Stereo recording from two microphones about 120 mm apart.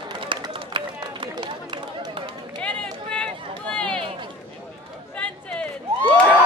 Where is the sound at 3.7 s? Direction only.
10° left (ahead or behind).